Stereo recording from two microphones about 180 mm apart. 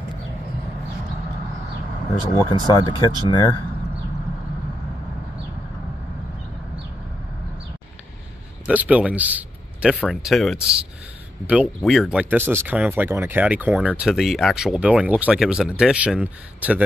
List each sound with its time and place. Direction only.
2.3 s speech: 20° left (ahead or behind)
8.6 s speech: 5° right (ahead or behind)